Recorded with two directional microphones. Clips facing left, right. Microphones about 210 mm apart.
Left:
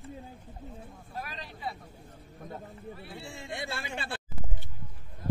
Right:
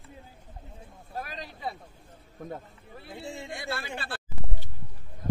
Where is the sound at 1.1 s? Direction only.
45° right (ahead or behind).